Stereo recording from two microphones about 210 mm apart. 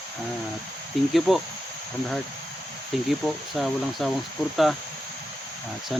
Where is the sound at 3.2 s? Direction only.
Centre (ahead or behind).